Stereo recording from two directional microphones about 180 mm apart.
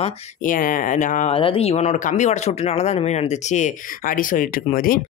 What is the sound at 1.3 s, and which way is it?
Speech, 30° left (ahead or behind).